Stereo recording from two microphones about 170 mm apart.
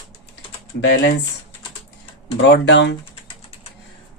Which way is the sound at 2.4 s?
90° left.